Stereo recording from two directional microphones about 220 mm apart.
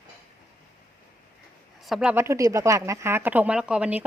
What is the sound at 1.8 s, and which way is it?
Speech, centre (ahead or behind).